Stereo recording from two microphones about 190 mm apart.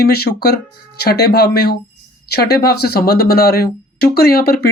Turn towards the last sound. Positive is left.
turn(degrees=55)  # may be behind; listen again after turning